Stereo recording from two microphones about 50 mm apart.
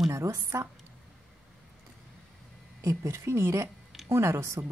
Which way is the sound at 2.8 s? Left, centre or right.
Right.